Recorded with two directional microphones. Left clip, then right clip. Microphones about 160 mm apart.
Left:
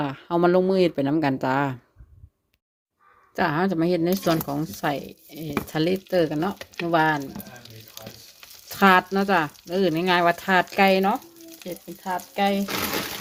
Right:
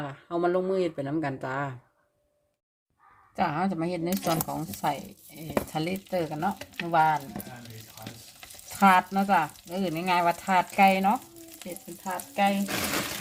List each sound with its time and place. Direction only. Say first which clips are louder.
0.0 s speech: left 7 dB; 55° left (ahead or behind)
3.3 s speech: left 5 dB; 60° left (ahead or behind)
8.8 s speech: left 3 dB; 80° left
12.0 s speech: left 2 dB; 70° left (ahead or behind)